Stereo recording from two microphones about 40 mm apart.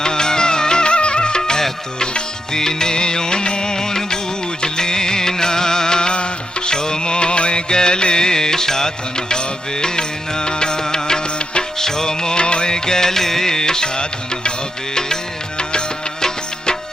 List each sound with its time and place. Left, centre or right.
0.0 s music: centre